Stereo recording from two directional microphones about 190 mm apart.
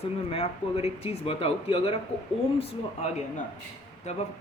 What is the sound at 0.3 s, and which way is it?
Speech, 30° left (ahead or behind).